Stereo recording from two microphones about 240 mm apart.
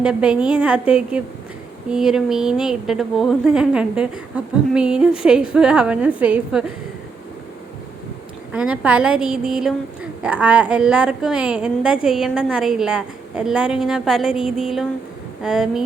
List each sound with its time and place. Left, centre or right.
0.0 s a woman's voice: centre
8.5 s a woman's voice: centre